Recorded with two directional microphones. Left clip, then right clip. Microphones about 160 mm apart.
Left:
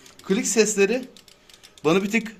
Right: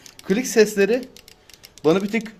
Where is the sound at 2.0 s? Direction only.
30° right (ahead or behind).